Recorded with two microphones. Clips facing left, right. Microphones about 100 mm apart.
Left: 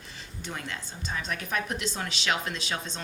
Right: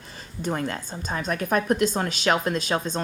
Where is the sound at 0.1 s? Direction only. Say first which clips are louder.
Right 10 dB; 45° right (ahead or behind).